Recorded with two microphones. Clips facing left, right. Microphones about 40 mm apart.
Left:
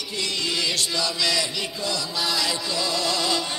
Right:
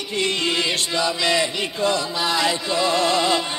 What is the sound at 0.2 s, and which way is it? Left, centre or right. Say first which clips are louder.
Chant: right 5 dB; right.